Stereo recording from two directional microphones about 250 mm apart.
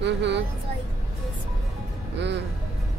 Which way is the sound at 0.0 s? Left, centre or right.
Right.